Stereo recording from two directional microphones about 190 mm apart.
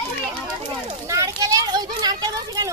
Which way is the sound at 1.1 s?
20° right (ahead or behind).